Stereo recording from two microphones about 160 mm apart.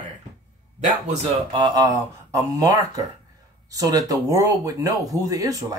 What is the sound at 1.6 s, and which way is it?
Speech, 25° right (ahead or behind).